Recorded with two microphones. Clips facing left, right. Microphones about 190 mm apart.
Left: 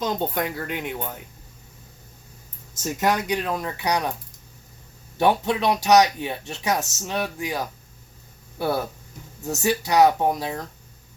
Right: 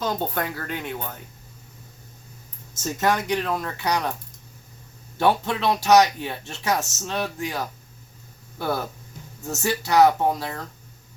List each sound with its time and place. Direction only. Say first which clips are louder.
0.0 s speech: left 1 dB; 20° left (ahead or behind)
3.0 s speech: even; 15° left (ahead or behind)
5.1 s speech: left 1 dB; 15° left (ahead or behind)